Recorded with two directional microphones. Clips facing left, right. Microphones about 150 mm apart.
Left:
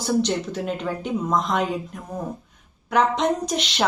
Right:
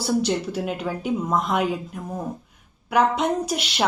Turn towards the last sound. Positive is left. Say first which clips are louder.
# even
turn(degrees=-5)  # may be behind; listen again after turning